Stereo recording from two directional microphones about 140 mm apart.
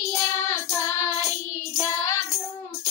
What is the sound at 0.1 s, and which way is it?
Child singing, 20° left (ahead or behind).